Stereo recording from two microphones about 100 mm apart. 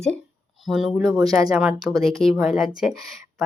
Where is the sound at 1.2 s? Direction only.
40° right (ahead or behind).